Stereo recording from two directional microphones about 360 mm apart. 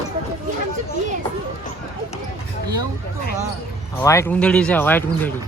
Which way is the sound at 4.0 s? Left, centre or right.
Centre.